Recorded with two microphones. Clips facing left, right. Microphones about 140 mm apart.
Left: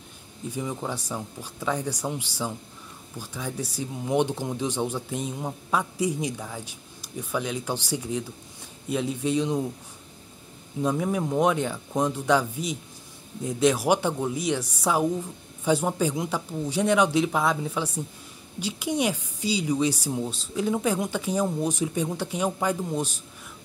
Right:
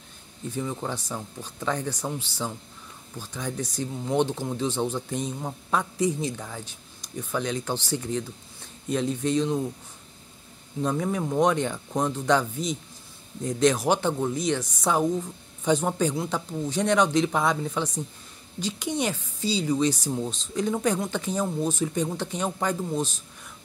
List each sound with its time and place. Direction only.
0.5 s speech: 10° left (ahead or behind)
10.8 s a man's voice: 10° left (ahead or behind)